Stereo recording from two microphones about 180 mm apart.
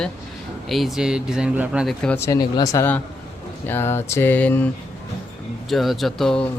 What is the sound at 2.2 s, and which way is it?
Speech, 20° left (ahead or behind).